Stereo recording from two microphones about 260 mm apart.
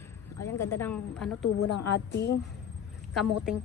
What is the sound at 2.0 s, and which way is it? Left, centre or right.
Speech, left.